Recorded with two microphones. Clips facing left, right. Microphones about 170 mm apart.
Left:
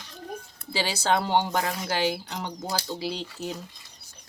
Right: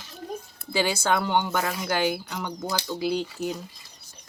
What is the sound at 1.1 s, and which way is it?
Speech, 35° left (ahead or behind).